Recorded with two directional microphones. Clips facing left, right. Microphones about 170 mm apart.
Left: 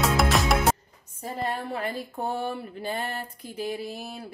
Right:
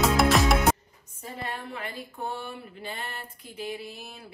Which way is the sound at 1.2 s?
45° left (ahead or behind).